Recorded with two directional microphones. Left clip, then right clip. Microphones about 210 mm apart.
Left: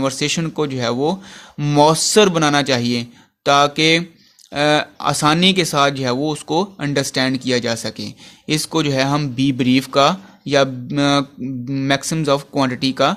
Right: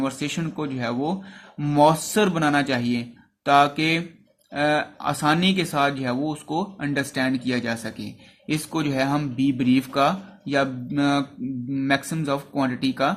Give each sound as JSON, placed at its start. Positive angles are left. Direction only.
{"t": 0.0, "sound": "speech", "side_deg": 45}